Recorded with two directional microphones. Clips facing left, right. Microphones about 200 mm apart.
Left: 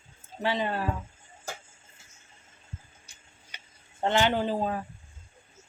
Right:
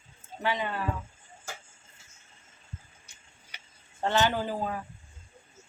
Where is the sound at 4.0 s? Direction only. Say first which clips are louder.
Left 2 dB; 20° left (ahead or behind).